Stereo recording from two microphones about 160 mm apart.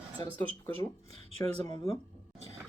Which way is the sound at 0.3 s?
10° left (ahead or behind).